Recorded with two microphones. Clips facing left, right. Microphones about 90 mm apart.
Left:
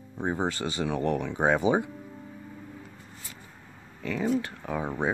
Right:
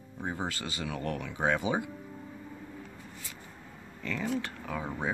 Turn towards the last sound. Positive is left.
turn(degrees=25)  # may be behind; listen again after turning